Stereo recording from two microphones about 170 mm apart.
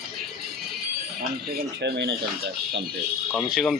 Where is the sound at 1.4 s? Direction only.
75° right (ahead or behind).